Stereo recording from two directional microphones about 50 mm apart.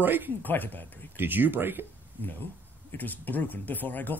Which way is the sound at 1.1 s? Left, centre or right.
Right.